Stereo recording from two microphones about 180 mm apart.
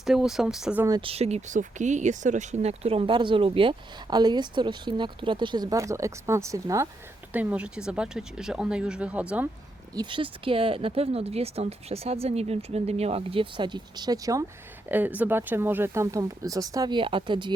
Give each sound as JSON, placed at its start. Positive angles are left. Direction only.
{"t": 0.0, "sound": "speech", "side_deg": 0}
{"t": 0.9, "sound": "speech", "side_deg": -20}
{"t": 1.1, "sound": "speech", "side_deg": -35}
{"t": 7.3, "sound": "speech", "side_deg": -5}
{"t": 9.9, "sound": "speech", "side_deg": -25}